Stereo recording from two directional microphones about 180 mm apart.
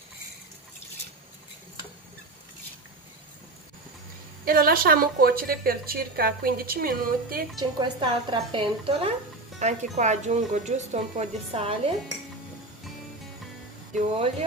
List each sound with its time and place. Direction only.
4.5 s a woman's voice: 55° right (ahead or behind)
7.5 s speech: 25° right (ahead or behind)
9.6 s speech: 40° right (ahead or behind)
13.9 s speech: 35° right (ahead or behind)